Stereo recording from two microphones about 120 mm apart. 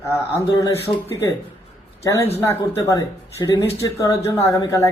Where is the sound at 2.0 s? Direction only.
20° left (ahead or behind).